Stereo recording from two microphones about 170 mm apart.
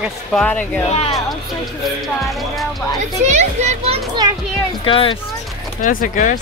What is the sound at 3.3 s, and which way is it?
Children playing, 40° right (ahead or behind).